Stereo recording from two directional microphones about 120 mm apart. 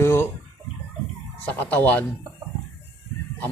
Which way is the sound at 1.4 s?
15° left (ahead or behind).